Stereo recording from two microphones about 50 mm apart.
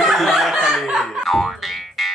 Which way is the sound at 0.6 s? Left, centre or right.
Centre.